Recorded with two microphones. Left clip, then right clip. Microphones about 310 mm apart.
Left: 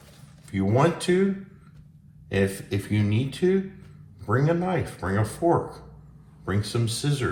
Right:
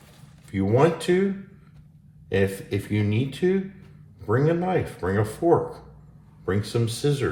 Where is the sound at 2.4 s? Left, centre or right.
Left.